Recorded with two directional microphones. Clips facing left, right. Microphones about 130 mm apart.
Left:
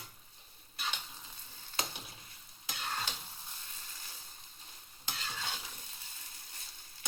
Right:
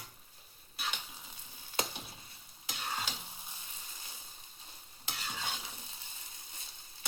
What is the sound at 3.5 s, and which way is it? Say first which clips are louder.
Sizzle: right 1 dB; 15° right (ahead or behind).